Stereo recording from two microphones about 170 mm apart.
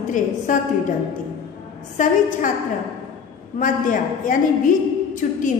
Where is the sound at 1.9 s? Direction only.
45° left (ahead or behind).